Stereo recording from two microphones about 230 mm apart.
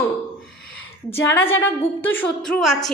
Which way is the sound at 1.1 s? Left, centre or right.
Centre.